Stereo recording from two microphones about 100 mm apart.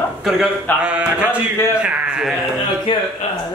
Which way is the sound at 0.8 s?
10° right (ahead or behind).